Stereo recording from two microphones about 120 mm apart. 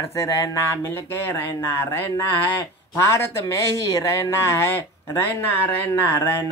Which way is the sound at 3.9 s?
25° left (ahead or behind).